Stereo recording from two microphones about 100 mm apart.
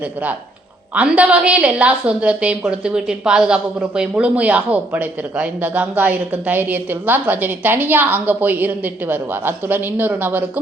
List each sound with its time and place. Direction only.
0.9 s a woman's voice: 15° right (ahead or behind)